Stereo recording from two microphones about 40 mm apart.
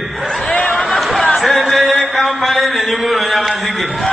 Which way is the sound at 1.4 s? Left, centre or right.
Centre.